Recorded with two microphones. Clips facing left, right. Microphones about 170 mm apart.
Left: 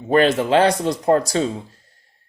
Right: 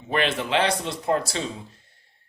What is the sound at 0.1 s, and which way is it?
Speech, 40° left (ahead or behind).